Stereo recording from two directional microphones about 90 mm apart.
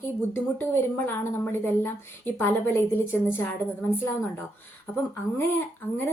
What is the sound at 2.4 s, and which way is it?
A woman's voice, 25° left (ahead or behind).